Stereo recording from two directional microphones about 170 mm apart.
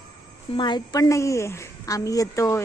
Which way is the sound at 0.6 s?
25° left (ahead or behind).